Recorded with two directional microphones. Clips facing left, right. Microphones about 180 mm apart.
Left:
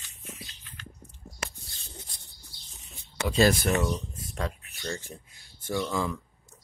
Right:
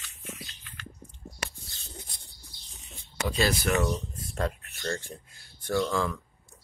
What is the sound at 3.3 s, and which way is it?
Speech, 50° left (ahead or behind).